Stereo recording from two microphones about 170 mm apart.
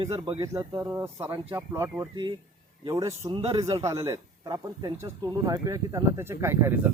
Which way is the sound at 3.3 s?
35° right (ahead or behind).